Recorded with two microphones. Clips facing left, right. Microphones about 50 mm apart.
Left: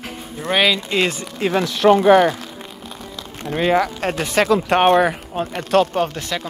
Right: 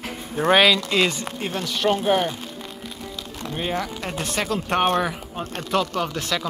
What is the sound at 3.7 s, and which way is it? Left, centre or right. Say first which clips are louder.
Speech: left 8 dB; left.